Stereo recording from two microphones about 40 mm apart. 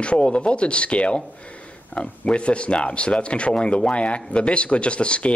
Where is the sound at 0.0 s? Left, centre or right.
Left.